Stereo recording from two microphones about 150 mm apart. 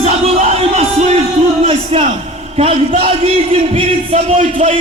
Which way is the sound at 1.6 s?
40° right (ahead or behind).